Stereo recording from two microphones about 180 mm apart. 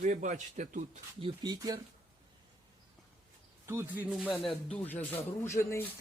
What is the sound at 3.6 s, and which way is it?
Speech, 15° right (ahead or behind).